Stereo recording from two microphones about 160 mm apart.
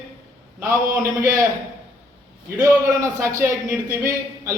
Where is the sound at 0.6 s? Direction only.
20° right (ahead or behind).